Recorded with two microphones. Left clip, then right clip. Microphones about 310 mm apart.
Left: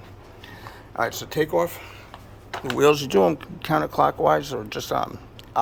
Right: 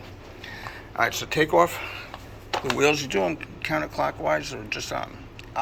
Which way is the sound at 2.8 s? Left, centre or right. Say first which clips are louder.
Left 6 dB; left.